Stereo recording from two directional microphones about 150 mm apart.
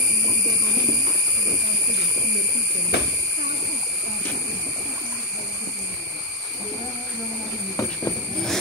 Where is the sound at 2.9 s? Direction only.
90° left.